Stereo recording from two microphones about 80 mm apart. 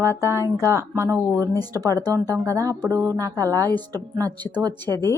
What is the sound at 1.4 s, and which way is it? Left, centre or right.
Speech, right.